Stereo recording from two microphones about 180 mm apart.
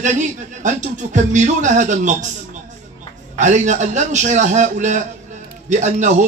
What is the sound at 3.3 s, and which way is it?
A man's voice, 40° right (ahead or behind).